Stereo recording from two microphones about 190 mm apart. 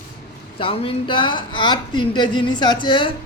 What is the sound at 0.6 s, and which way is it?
Speech, 30° left (ahead or behind).